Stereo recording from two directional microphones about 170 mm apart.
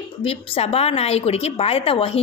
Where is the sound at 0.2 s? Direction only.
35° left (ahead or behind).